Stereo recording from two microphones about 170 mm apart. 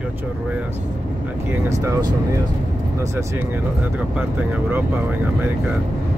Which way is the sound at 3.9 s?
10° right (ahead or behind).